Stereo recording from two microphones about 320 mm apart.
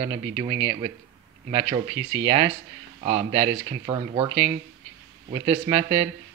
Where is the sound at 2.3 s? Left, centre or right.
Centre.